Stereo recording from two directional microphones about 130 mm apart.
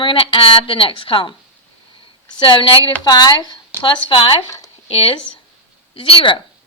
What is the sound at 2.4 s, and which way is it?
A woman's voice, 40° left (ahead or behind).